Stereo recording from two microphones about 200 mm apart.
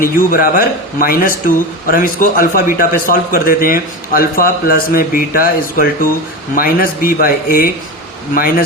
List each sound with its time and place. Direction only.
0.0 s speech: 45° left (ahead or behind)